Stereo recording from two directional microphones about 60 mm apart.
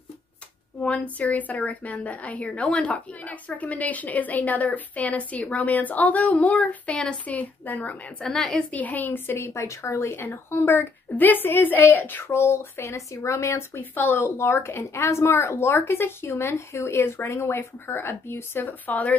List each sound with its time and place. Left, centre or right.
0.7 s a woman's voice: left
8.2 s a woman's voice: centre
8.6 s a woman's voice: left
10.3 s a woman's voice: left
13.7 s a woman's voice: left
14.3 s a woman's voice: left